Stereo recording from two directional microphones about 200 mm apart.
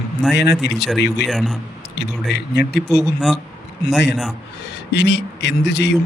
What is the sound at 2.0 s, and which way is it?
Speech, 55° left (ahead or behind).